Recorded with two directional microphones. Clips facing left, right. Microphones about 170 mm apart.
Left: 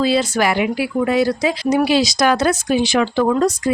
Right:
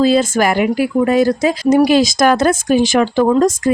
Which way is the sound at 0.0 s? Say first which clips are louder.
Right 4 dB; 45° right (ahead or behind).